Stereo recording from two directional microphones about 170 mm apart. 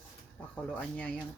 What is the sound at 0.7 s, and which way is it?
Speech, 10° left (ahead or behind).